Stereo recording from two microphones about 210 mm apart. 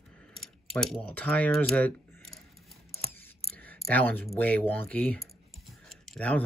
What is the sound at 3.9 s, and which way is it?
Speech, 10° left (ahead or behind).